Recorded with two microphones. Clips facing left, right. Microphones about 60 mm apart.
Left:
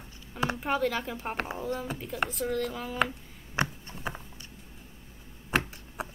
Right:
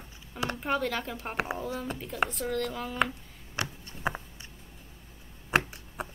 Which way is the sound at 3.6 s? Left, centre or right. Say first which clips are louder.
Left 5 dB; left.